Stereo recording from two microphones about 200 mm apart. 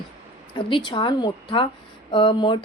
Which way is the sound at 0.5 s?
20° left (ahead or behind).